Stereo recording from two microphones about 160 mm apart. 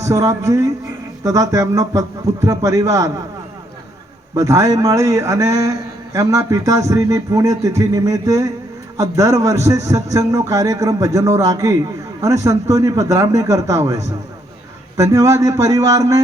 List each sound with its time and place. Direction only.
0.0 s a man's voice: 20° right (ahead or behind)
4.4 s a man's voice: 20° right (ahead or behind)